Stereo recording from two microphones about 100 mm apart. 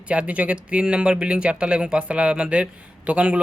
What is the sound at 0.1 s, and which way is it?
Speech, 15° right (ahead or behind).